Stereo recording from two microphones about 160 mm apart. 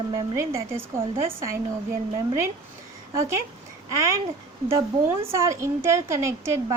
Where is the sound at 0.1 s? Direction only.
20° right (ahead or behind).